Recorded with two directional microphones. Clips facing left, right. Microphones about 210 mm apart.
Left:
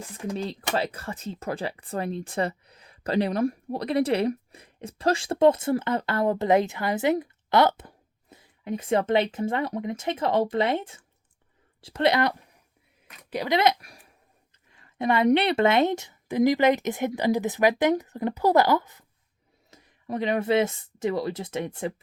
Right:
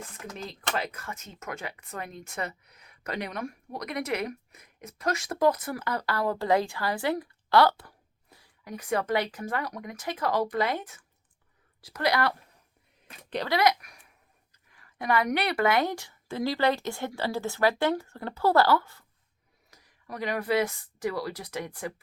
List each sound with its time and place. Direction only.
0.3 s speech: 30° left (ahead or behind)
13.3 s speech: 10° left (ahead or behind)
13.6 s speech: 25° left (ahead or behind)